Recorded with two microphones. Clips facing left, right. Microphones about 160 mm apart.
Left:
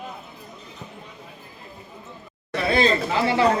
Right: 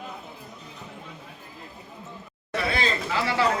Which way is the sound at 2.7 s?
30° left (ahead or behind).